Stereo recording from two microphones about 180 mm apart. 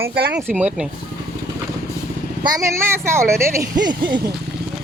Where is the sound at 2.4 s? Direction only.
20° right (ahead or behind).